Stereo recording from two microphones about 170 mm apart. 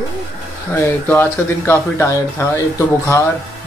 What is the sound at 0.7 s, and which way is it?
Speech, 15° left (ahead or behind).